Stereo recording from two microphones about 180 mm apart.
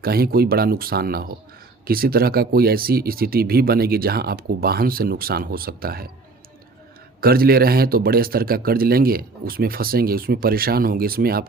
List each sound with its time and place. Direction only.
0.0 s speech: 55° right (ahead or behind)
7.2 s speech: 55° right (ahead or behind)